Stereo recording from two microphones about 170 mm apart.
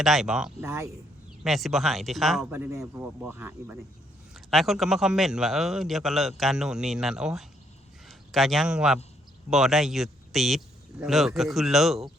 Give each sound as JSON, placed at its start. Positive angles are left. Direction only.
{"t": 0.0, "sound": "a man's voice", "side_deg": 0}
{"t": 0.6, "sound": "speech", "side_deg": -15}
{"t": 1.5, "sound": "a man's voice", "side_deg": 0}
{"t": 2.5, "sound": "speech", "side_deg": -15}
{"t": 4.4, "sound": "a man's voice", "side_deg": 0}